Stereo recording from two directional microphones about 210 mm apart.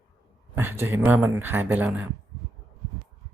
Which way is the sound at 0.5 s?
10° right (ahead or behind).